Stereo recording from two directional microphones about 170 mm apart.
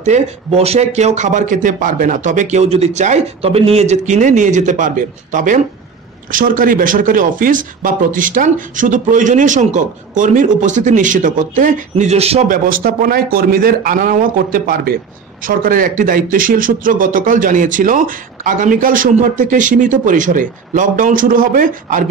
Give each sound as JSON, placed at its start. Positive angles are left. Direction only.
{"t": 0.0, "sound": "speech", "side_deg": -40}
{"t": 12.4, "sound": "speech", "side_deg": -55}